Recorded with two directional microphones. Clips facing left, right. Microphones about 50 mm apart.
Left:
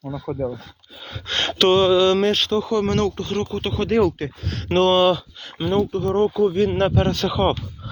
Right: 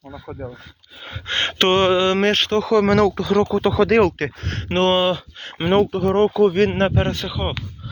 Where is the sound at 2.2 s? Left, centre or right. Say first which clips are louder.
Right 1 dB; right.